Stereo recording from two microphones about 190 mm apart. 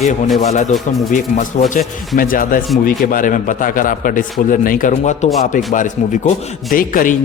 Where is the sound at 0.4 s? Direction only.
40° left (ahead or behind).